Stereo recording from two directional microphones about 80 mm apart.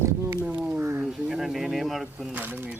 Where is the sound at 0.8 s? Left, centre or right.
Right.